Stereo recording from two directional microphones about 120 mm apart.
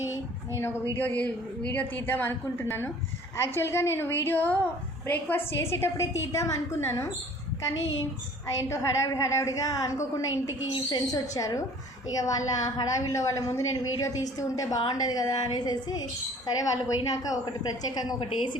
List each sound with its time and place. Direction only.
0.1 s a woman's voice: 20° left (ahead or behind)
8.5 s a woman's voice: 25° left (ahead or behind)